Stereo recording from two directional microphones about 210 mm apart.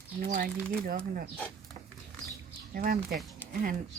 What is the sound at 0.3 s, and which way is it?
Speech, 40° right (ahead or behind).